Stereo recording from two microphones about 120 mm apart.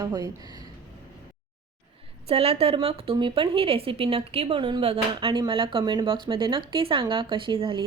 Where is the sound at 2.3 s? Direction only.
55° right (ahead or behind).